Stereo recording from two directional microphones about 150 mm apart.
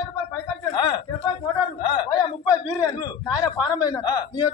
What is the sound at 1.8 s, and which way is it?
A man's voice, 30° left (ahead or behind).